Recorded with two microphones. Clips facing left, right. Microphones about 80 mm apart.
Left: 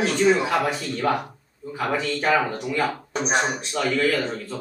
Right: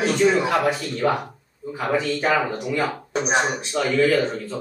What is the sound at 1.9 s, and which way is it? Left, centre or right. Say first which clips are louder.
Speech: right 3 dB; right.